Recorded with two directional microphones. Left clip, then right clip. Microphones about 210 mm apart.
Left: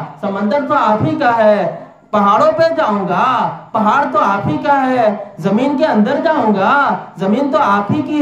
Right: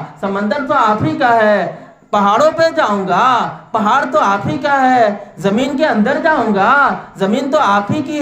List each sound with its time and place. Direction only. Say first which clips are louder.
0.2 s speech: left 1 dB; 50° right (ahead or behind)